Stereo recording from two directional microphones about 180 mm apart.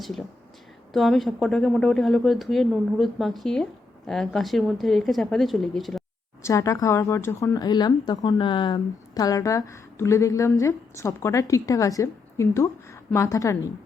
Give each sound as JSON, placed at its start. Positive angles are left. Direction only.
{"t": 0.0, "sound": "speech", "side_deg": 0}
{"t": 6.4, "sound": "speech", "side_deg": 15}